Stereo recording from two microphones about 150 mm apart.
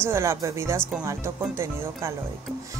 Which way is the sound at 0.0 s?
15° right (ahead or behind).